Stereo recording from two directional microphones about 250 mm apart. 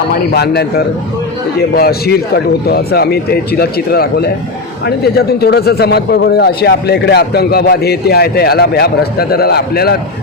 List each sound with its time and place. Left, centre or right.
0.3 s speech: left
1.7 s speech: left